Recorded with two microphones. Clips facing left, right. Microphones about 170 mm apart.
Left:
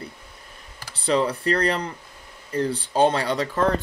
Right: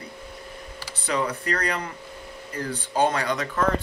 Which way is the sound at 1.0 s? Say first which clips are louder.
Left 5 dB; 30° left (ahead or behind).